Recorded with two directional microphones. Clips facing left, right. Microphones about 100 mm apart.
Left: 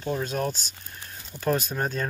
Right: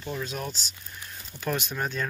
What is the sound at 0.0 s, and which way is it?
Speech, 45° left (ahead or behind).